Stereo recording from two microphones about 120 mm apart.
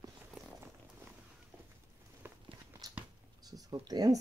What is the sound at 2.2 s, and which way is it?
Biting, 20° right (ahead or behind).